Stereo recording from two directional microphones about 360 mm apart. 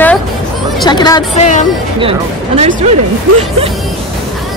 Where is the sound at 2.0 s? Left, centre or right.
Centre.